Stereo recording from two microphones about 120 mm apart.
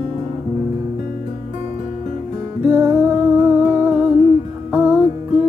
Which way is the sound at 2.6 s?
20° right (ahead or behind).